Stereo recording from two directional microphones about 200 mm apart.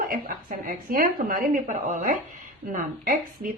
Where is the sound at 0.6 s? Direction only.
45° right (ahead or behind).